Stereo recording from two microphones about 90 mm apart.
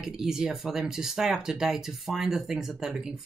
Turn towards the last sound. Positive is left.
turn(degrees=-5)  # may be behind; listen again after turning